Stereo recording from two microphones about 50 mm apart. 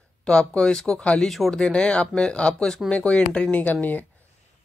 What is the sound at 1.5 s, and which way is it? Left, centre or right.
Speech, centre.